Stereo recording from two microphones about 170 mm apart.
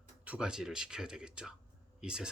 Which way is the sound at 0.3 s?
5° right (ahead or behind).